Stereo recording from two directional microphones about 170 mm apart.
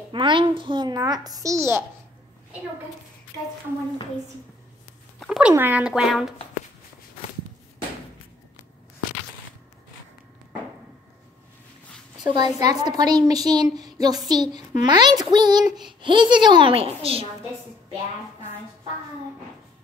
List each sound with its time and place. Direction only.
0.1 s a woman's voice: 30° right (ahead or behind)
5.2 s speech: centre (ahead or behind)
12.3 s a woman's voice: 25° right (ahead or behind)